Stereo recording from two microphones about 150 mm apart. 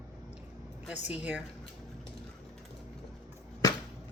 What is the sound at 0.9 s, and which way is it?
Speech, 10° right (ahead or behind).